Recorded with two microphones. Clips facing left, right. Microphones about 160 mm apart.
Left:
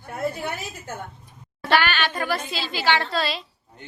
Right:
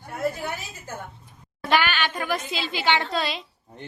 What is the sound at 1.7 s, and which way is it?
A woman's voice, 15° right (ahead or behind).